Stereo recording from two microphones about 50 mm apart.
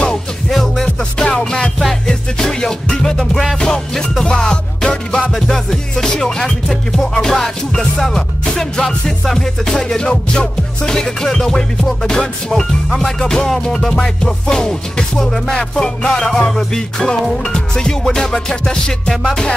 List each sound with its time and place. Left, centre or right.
0.5 s music: centre